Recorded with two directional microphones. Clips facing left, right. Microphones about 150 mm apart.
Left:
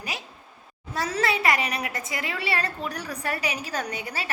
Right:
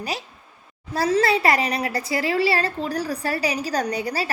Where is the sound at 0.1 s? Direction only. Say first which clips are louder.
Right 6 dB; 35° right (ahead or behind).